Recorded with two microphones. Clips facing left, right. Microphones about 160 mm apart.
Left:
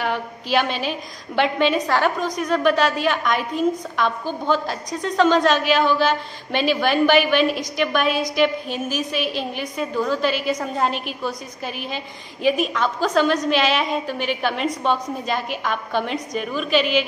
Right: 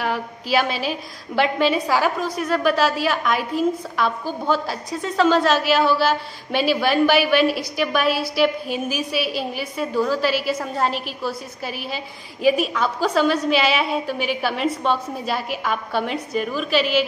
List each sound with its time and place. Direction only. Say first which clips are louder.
0.0 s a woman's voice: even; 5° right (ahead or behind)